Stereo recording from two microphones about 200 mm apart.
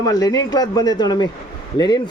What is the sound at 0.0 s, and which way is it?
Speech, 20° left (ahead or behind).